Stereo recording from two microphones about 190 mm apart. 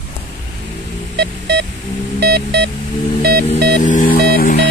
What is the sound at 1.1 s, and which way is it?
Music, 60° right (ahead or behind).